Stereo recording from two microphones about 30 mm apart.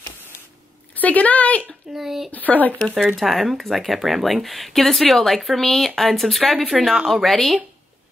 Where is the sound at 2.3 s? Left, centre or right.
Left.